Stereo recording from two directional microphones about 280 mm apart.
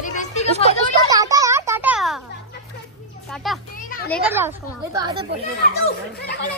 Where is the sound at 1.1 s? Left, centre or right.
Centre.